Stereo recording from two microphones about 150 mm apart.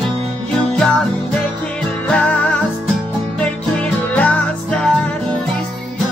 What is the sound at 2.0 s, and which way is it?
Music, 10° left (ahead or behind).